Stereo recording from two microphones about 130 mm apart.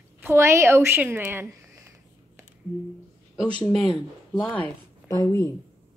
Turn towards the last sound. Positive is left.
turn(degrees=20)  # may be behind; listen again after turning